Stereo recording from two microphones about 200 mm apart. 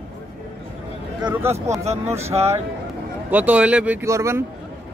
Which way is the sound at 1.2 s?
5° right (ahead or behind).